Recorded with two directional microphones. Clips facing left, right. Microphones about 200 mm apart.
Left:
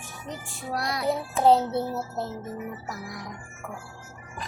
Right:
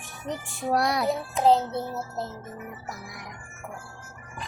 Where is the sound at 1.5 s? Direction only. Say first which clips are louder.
Left 2 dB; 5° left (ahead or behind).